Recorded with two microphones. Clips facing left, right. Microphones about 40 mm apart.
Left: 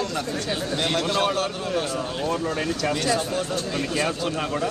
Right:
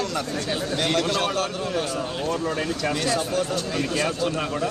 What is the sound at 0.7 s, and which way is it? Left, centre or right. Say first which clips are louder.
Speech: right 1 dB; centre.